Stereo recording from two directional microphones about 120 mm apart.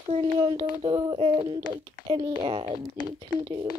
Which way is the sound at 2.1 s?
35° right (ahead or behind).